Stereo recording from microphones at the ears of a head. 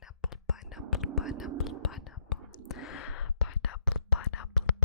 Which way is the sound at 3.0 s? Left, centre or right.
Left.